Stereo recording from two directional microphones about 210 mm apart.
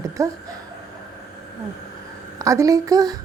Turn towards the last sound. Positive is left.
turn(degrees=-15)  # may be behind; listen again after turning